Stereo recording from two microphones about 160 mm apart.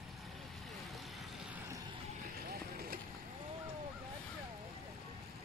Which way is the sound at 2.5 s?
70° right (ahead or behind).